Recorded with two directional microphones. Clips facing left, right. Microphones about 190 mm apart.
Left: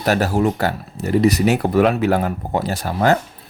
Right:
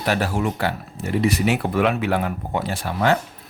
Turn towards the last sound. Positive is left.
turn(degrees=40)  # may be behind; listen again after turning